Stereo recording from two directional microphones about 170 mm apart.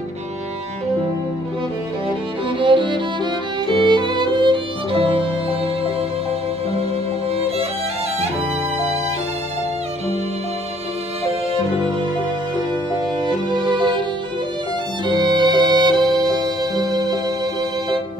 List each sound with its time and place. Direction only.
2.6 s music: 30° right (ahead or behind)
13.2 s music: 25° right (ahead or behind)
15.0 s music: 25° right (ahead or behind)